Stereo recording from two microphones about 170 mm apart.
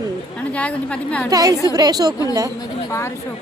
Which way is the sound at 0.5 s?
10° left (ahead or behind).